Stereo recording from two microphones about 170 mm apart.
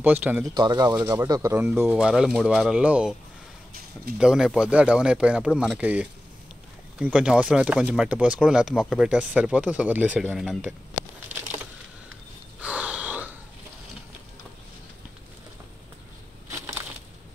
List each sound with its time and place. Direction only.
0.0 s speech: 10° right (ahead or behind)
0.6 s speech: 25° right (ahead or behind); by 3.2 s 5° right (ahead or behind)
4.2 s speech: 5° right (ahead or behind)
12.5 s a sound: 5° right (ahead or behind)